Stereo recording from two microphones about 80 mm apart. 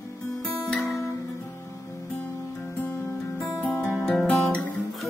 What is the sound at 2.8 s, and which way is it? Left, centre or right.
Music, centre.